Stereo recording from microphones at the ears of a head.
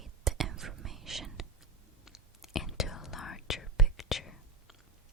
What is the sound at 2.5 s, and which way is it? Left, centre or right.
Whispering, left.